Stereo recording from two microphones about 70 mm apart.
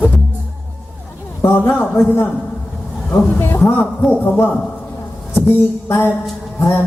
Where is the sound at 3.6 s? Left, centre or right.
Left.